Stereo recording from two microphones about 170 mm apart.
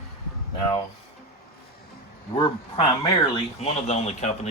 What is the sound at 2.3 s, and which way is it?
Speech, 30° left (ahead or behind).